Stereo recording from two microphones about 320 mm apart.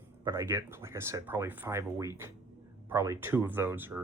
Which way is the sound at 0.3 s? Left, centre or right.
Centre.